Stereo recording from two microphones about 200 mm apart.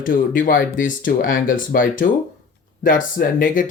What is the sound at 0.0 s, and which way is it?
Speech, 45° left (ahead or behind).